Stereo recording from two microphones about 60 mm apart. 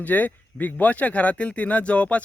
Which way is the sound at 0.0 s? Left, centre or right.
Left.